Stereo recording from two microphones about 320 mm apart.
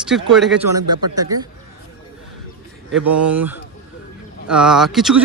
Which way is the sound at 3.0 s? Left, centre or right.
Right.